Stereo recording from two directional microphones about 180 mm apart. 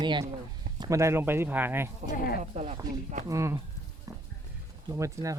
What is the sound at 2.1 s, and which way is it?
Speech, 55° left (ahead or behind).